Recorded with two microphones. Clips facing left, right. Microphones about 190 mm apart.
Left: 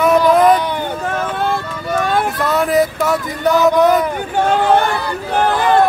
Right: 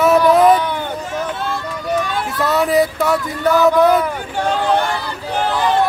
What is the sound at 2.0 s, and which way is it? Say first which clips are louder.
Vehicle: left 6 dB; 55° left (ahead or behind).